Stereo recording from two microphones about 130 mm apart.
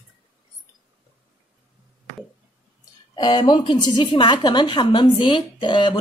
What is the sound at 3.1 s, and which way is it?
A woman's voice, 35° left (ahead or behind).